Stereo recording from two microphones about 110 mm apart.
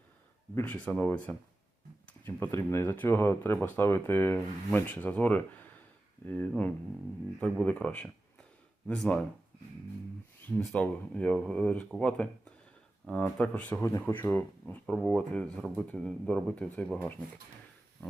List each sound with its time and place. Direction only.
0.5 s speech: 15° left (ahead or behind)
7.6 s speech: 10° left (ahead or behind)
10.5 s speech: 10° left (ahead or behind)